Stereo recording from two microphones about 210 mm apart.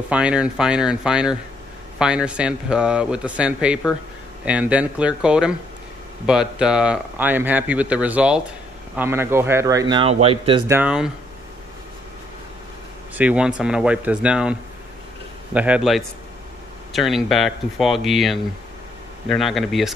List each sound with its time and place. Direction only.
0.1 s speech: 5° right (ahead or behind); by 10.6 s 25° right (ahead or behind)
10.7 s speech: 5° right (ahead or behind)
13.1 s speech: 5° right (ahead or behind)